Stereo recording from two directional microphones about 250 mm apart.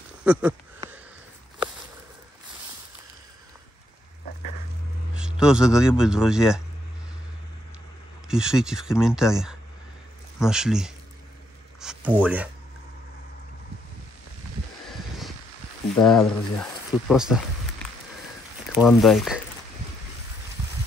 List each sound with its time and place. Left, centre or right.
0.2 s a sound: centre
5.1 s speech: centre
8.3 s speech: centre
14.9 s a sound: centre
16.0 s speech: centre
18.7 s speech: centre